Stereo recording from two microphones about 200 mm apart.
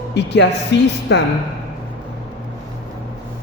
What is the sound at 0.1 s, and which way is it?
A man's voice, 60° left (ahead or behind).